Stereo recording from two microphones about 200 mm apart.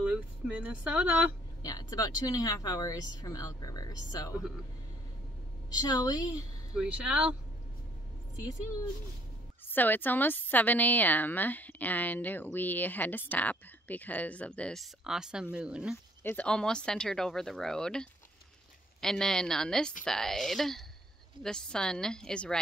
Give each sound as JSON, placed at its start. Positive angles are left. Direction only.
{"t": 0.0, "sound": "speech", "side_deg": -5}
{"t": 1.6, "sound": "speech", "side_deg": 20}
{"t": 5.8, "sound": "speech", "side_deg": 20}
{"t": 6.7, "sound": "speech", "side_deg": -5}
{"t": 9.7, "sound": "a woman's voice", "side_deg": 10}
{"t": 16.2, "sound": "speech", "side_deg": 10}